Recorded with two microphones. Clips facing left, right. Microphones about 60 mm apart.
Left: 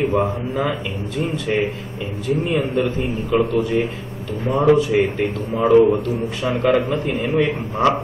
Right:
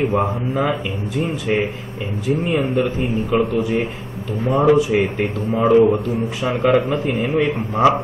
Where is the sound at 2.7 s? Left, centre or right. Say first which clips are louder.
Right 1 dB; centre.